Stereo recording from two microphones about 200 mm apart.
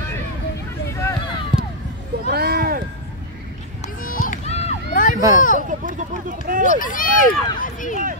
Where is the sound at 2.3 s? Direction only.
50° right (ahead or behind).